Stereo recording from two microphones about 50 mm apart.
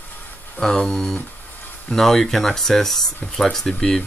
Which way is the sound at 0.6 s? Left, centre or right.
Centre.